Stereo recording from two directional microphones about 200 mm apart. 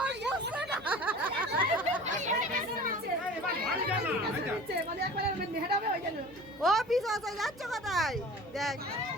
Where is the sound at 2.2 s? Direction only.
40° right (ahead or behind).